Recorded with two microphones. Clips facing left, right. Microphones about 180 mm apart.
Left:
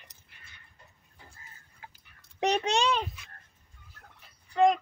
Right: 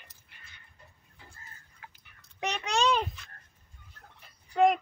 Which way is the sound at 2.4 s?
35° left (ahead or behind).